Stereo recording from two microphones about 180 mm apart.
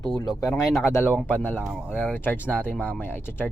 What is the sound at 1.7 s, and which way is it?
Speech, 5° right (ahead or behind).